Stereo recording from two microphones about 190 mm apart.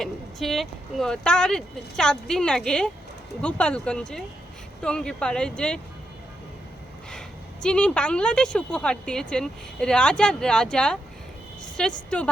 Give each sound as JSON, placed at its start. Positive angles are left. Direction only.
{"t": 0.0, "sound": "a woman's voice", "side_deg": 0}
{"t": 7.1, "sound": "a woman's voice", "side_deg": 5}